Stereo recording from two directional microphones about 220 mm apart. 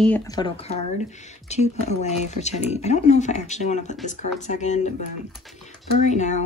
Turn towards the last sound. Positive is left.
turn(degrees=30)  # may be behind; listen again after turning